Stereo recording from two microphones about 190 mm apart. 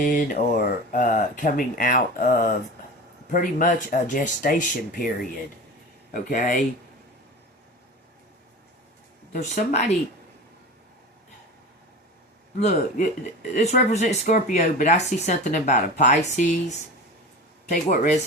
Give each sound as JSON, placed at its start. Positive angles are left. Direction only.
{"t": 0.0, "sound": "speech", "side_deg": 45}
{"t": 6.1, "sound": "speech", "side_deg": 45}
{"t": 9.3, "sound": "speech", "side_deg": 40}
{"t": 12.5, "sound": "speech", "side_deg": 40}